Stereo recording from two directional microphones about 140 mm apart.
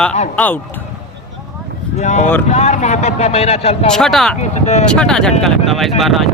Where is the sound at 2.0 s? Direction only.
55° left (ahead or behind).